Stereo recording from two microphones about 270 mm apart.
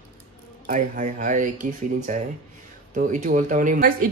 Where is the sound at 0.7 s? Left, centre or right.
Right.